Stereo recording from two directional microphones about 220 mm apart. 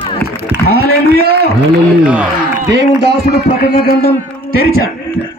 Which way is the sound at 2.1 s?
5° right (ahead or behind).